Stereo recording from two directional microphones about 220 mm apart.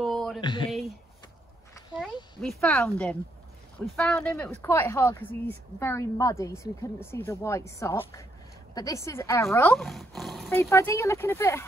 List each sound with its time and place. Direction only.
0.0 s a sound: centre (ahead or behind)
0.4 s speech: 20° left (ahead or behind)
0.7 s a sound: centre (ahead or behind)
2.4 s speech: 5° left (ahead or behind)
9.8 s speech: centre (ahead or behind)
10.6 s speech: 10° left (ahead or behind)